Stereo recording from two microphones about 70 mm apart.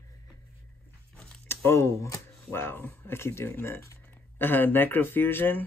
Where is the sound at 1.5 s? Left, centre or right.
Left.